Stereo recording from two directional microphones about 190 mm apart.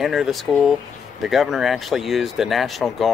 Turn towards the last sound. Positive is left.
turn(degrees=0)  # may be behind; listen again after turning